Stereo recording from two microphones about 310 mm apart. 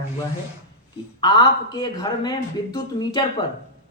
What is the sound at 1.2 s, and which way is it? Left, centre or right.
A man's voice, centre.